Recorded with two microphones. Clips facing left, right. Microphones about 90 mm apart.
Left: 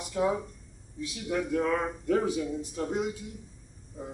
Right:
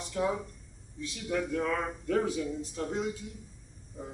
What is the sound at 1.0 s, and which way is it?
Speech, 10° left (ahead or behind).